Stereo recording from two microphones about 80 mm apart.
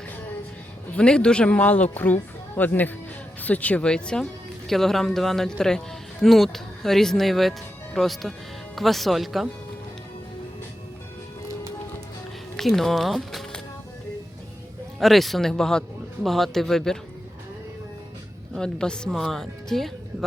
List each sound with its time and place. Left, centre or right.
0.9 s a man's voice: centre
12.5 s a man's voice: centre
14.9 s a man's voice: centre
18.5 s a man's voice: centre